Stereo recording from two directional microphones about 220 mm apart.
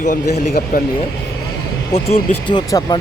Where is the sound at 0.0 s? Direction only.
35° left (ahead or behind).